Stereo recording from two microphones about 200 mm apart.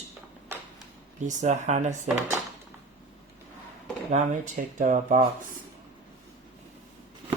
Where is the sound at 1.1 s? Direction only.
35° right (ahead or behind).